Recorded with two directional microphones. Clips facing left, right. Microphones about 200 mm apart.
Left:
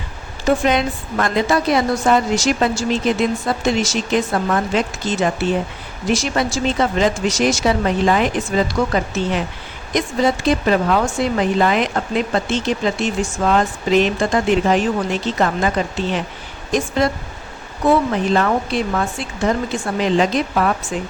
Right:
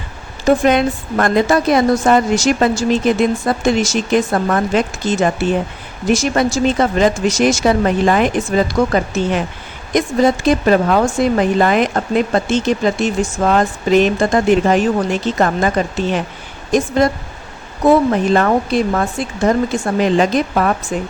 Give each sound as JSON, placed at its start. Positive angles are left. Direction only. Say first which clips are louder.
{"t": 0.6, "sound": "speech", "louder": "right 4 dB", "side_deg": -50}
{"t": 18.1, "sound": "speech", "louder": "right 4 dB", "side_deg": -45}